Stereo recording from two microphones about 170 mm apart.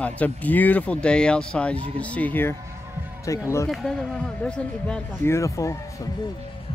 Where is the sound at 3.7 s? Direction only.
Centre (ahead or behind).